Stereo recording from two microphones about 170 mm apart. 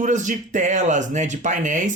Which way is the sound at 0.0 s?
45° right (ahead or behind).